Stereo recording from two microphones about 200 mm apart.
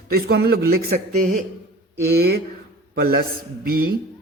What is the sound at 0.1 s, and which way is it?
A man's voice, 50° right (ahead or behind).